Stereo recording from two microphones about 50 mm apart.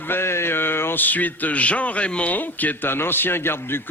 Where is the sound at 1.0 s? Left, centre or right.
Left.